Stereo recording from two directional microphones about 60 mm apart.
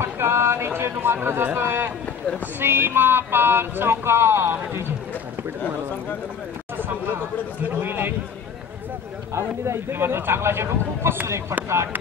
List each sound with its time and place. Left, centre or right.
0.0 s a sound: right
0.7 s speech: right
7.6 s speech: right
9.3 s a man's voice: right